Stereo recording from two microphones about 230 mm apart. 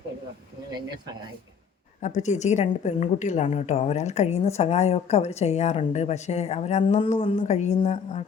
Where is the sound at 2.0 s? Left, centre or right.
Left.